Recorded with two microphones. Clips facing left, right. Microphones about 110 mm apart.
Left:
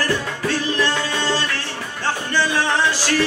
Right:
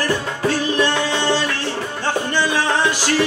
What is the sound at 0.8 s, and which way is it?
Music, 15° right (ahead or behind).